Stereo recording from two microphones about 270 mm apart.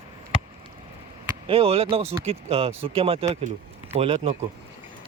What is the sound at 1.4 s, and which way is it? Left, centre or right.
Speech, right.